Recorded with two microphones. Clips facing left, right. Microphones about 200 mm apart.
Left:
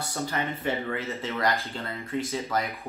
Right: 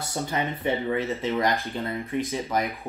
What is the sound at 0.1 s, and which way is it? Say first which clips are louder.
Speech: right 3 dB; 15° right (ahead or behind).